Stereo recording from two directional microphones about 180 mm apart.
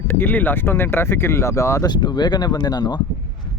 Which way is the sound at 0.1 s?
10° left (ahead or behind).